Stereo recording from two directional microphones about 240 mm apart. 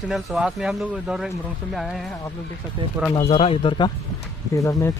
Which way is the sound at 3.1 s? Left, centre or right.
Left.